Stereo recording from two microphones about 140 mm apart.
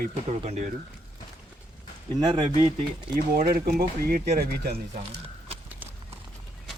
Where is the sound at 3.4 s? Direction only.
90° right.